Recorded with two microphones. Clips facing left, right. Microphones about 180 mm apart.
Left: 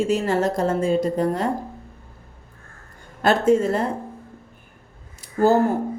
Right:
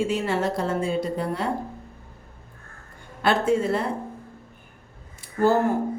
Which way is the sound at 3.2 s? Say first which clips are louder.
Left 4 dB; 45° left (ahead or behind).